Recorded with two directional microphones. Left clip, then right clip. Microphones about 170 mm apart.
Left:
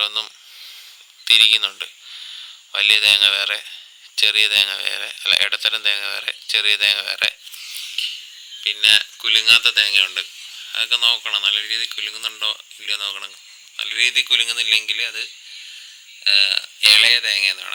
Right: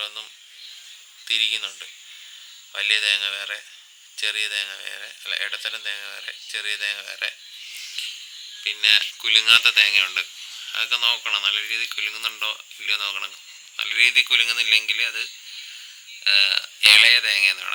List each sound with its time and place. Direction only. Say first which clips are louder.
0.0 s speech: left 10 dB; 40° left (ahead or behind)
7.7 s a sound: left 6 dB; 25° left (ahead or behind)
8.6 s speech: left 3 dB; 15° left (ahead or behind)